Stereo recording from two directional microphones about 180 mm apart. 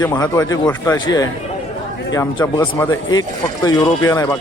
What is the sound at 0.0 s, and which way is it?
A man's voice, 20° left (ahead or behind).